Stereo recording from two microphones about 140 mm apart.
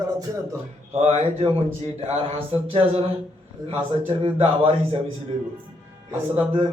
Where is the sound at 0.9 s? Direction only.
55° right (ahead or behind).